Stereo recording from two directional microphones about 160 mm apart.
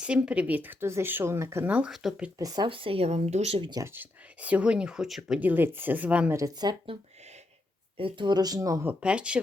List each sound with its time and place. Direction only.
0.0 s speech: 5° right (ahead or behind)
2.4 s speech: 25° right (ahead or behind); by 3.7 s 40° right (ahead or behind)
3.7 s speech: 20° right (ahead or behind)
6.3 s speech: 25° right (ahead or behind)
7.9 s speech: 30° right (ahead or behind)
8.9 s speech: 5° right (ahead or behind)